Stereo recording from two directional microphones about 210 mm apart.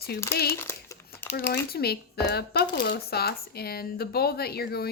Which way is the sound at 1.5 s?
50° left (ahead or behind).